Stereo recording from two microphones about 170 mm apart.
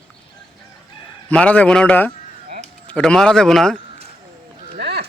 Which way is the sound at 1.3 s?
5° left (ahead or behind).